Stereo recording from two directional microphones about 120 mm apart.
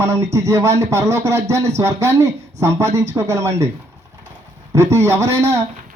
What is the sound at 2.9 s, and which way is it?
Speech, 65° right (ahead or behind).